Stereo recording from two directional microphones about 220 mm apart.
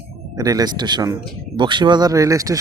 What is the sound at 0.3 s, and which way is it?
Speech, 15° right (ahead or behind).